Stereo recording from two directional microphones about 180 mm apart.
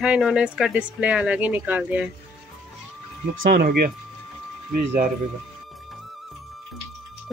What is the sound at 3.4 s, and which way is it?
Speech, 60° right (ahead or behind).